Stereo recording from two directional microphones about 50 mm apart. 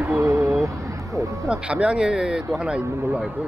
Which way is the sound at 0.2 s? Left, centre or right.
Right.